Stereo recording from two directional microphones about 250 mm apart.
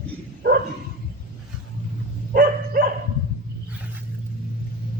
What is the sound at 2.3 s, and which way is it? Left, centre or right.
Dog, right.